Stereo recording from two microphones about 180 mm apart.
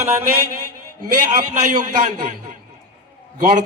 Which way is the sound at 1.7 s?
45° right (ahead or behind).